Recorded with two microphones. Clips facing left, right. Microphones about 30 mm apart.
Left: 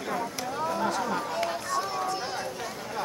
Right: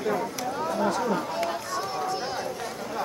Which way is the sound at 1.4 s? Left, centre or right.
Centre.